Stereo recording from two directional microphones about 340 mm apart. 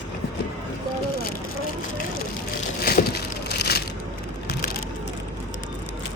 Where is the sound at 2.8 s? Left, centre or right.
Left.